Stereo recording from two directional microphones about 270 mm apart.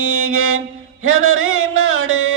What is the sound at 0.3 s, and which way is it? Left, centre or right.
Mantra, right.